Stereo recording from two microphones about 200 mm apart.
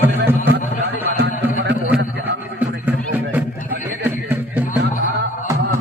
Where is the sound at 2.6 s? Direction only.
10° right (ahead or behind).